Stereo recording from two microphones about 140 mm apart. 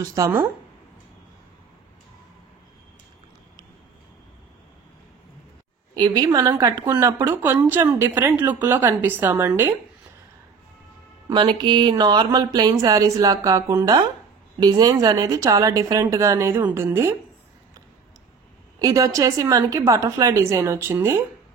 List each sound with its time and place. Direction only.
0.2 s speech: 20° right (ahead or behind)
5.9 s a woman's voice: 30° right (ahead or behind)
11.2 s a woman's voice: 35° right (ahead or behind); by 17.2 s 20° right (ahead or behind)
18.8 s speech: 25° right (ahead or behind)